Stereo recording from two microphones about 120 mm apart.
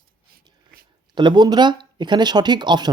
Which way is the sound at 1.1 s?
40° right (ahead or behind).